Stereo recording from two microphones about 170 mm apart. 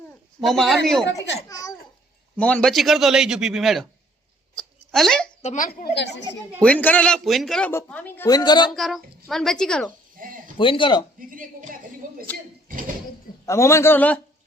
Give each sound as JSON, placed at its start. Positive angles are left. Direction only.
{"t": 0.4, "sound": "a man's voice", "side_deg": 0}
{"t": 1.5, "sound": "speech", "side_deg": 20}
{"t": 2.3, "sound": "a man's voice", "side_deg": 5}
{"t": 4.5, "sound": "a sound", "side_deg": 0}
{"t": 5.4, "sound": "a woman's voice", "side_deg": 45}
{"t": 5.9, "sound": "speech", "side_deg": 90}
{"t": 6.6, "sound": "a man's voice", "side_deg": 10}
{"t": 7.7, "sound": "a man's voice", "side_deg": 10}
{"t": 8.3, "sound": "speech", "side_deg": 25}
{"t": 8.7, "sound": "a man's voice", "side_deg": 0}
{"t": 10.2, "sound": "speech", "side_deg": -55}
{"t": 10.6, "sound": "speech", "side_deg": 30}
{"t": 12.0, "sound": "a sound", "side_deg": -50}
{"t": 13.4, "sound": "a man's voice", "side_deg": 15}